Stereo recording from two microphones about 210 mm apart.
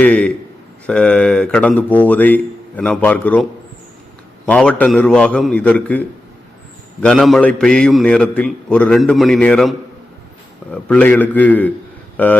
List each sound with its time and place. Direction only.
0.0 s a man's voice: 5° left (ahead or behind)
4.4 s a man's voice: 5° left (ahead or behind)
7.0 s a man's voice: centre (ahead or behind)